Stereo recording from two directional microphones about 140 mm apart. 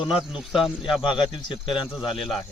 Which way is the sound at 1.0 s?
35° left (ahead or behind).